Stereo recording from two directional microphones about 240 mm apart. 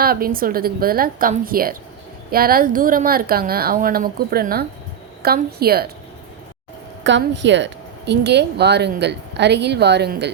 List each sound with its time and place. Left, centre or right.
0.0 s a woman's voice: right
7.0 s a woman's voice: right